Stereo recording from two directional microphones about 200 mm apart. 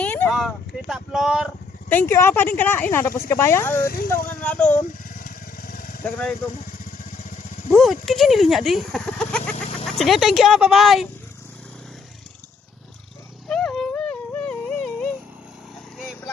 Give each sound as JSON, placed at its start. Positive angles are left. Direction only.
{"t": 0.0, "sound": "speech", "side_deg": 5}
{"t": 1.9, "sound": "speech", "side_deg": 10}
{"t": 3.8, "sound": "speech", "side_deg": 45}
{"t": 4.3, "sound": "speech", "side_deg": 5}
{"t": 5.0, "sound": "vehicle", "side_deg": 45}
{"t": 6.0, "sound": "speech", "side_deg": 5}
{"t": 7.8, "sound": "speech", "side_deg": 0}
{"t": 13.5, "sound": "a sound", "side_deg": 5}